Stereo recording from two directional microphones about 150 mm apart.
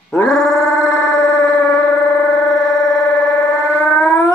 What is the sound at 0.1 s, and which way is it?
Dog, 5° left (ahead or behind).